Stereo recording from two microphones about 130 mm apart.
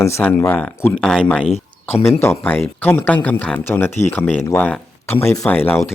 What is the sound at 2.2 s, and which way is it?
Speech, 15° left (ahead or behind).